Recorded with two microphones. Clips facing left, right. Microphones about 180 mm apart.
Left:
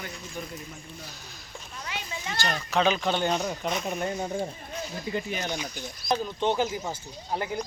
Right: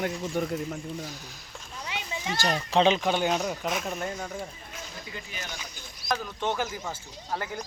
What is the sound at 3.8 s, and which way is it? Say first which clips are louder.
Speech: left 2 dB; 10° left (ahead or behind).